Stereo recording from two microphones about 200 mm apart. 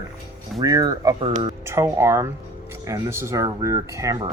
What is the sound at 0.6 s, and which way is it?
Speech, 15° right (ahead or behind).